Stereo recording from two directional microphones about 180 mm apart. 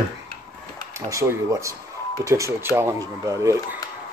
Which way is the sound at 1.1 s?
15° right (ahead or behind).